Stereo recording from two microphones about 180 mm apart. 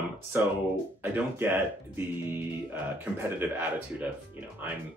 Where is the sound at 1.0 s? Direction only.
10° right (ahead or behind).